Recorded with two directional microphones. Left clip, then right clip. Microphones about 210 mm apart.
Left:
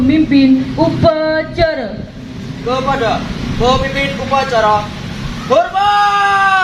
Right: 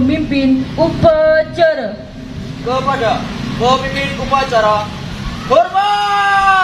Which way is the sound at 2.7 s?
10° left (ahead or behind).